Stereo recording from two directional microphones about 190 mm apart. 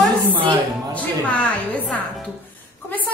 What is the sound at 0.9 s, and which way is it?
A woman's voice, 5° left (ahead or behind).